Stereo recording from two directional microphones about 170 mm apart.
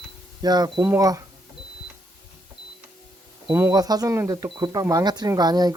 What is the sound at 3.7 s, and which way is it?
Speech, 20° right (ahead or behind).